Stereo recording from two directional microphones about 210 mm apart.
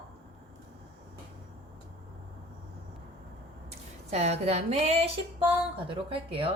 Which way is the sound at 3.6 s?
30° right (ahead or behind).